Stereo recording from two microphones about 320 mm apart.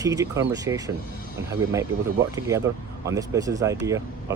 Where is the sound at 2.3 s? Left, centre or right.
Centre.